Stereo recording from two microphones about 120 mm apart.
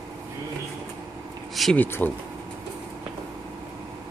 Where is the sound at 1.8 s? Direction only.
15° left (ahead or behind).